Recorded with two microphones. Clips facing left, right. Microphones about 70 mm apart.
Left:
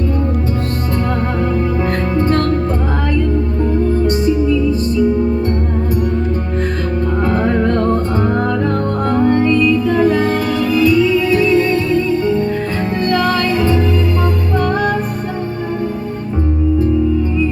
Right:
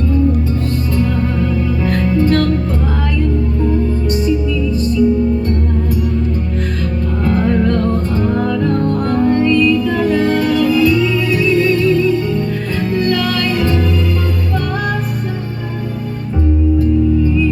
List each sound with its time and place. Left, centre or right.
1.9 s music: left
7.3 s music: left
10.1 s music: centre
11.3 s music: left
13.1 s music: left